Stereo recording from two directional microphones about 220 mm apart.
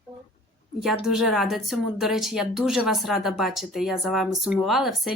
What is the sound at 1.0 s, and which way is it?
A woman's voice, centre (ahead or behind).